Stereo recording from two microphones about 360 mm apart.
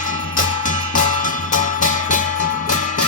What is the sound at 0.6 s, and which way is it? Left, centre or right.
Music, left.